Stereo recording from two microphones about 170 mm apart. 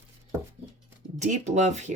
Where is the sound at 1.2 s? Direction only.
45° right (ahead or behind).